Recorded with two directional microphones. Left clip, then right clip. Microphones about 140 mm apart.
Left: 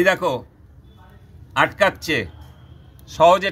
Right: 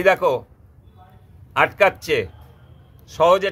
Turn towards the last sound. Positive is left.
turn(degrees=-60)  # may be behind; listen again after turning